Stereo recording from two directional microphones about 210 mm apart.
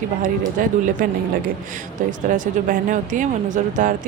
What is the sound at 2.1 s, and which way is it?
Speech, 40° right (ahead or behind).